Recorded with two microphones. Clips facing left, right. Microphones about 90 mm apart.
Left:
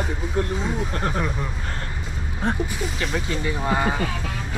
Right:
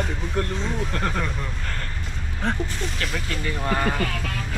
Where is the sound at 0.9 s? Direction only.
20° left (ahead or behind).